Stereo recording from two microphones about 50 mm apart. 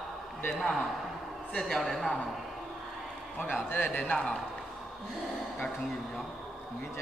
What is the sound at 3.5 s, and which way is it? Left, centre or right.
Speech, left.